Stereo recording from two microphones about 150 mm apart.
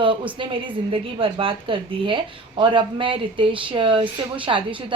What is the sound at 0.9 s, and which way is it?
A woman's voice, 35° right (ahead or behind).